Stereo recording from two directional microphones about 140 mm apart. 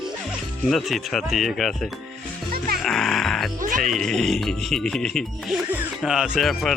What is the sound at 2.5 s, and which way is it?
Music, 90° right.